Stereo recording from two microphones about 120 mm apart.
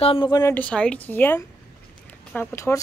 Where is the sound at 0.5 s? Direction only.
10° left (ahead or behind).